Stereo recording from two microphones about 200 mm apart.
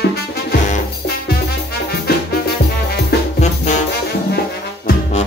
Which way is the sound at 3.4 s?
35° left (ahead or behind).